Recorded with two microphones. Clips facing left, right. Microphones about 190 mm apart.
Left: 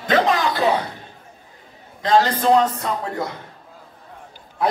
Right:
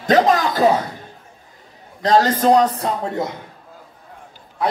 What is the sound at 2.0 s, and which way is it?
Speech, 40° right (ahead or behind).